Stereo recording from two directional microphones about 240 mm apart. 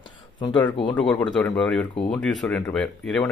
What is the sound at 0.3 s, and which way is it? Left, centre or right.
Speech, centre.